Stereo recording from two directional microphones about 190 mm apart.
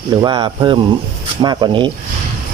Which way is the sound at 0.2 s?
25° right (ahead or behind).